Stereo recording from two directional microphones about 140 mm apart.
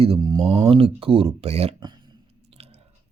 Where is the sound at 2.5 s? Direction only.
45° right (ahead or behind).